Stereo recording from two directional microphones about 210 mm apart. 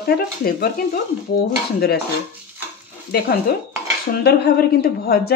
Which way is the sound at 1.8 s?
50° left (ahead or behind).